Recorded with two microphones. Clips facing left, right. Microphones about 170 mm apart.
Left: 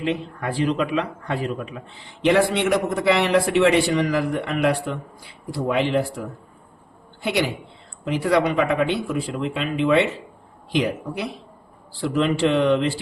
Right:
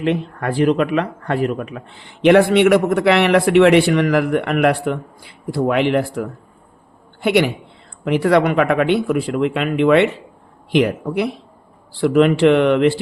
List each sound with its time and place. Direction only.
0.0 s speech: 60° right (ahead or behind)